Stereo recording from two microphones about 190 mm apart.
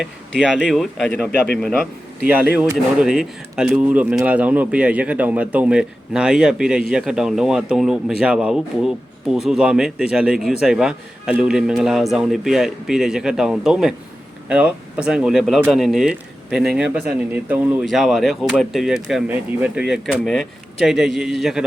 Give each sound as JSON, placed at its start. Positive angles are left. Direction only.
{"t": 0.5, "sound": "speech", "side_deg": 0}
{"t": 2.6, "sound": "speech", "side_deg": -5}